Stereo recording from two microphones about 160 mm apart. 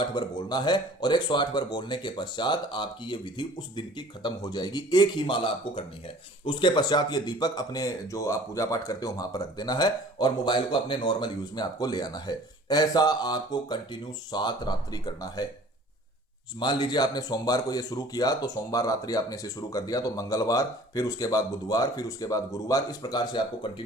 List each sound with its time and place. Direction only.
0.0 s speech: 30° left (ahead or behind)
16.6 s speech: 30° left (ahead or behind)